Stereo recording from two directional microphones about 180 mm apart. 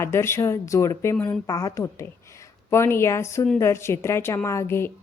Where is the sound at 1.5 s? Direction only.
20° left (ahead or behind).